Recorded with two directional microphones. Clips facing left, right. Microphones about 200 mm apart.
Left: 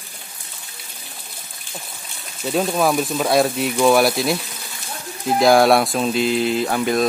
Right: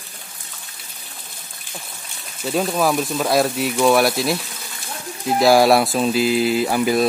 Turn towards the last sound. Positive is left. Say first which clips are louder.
# right 1 dB
turn(degrees=-5)  # may be behind; listen again after turning